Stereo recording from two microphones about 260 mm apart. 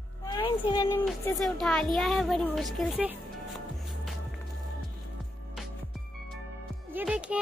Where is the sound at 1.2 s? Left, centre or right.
Centre.